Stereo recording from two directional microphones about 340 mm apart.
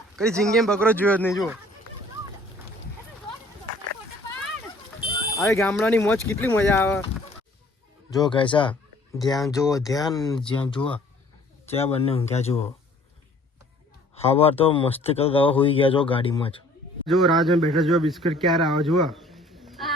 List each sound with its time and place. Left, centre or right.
0.2 s speech: centre
5.4 s speech: centre
8.1 s speech: centre
11.7 s speech: centre
14.2 s speech: centre
17.1 s speech: centre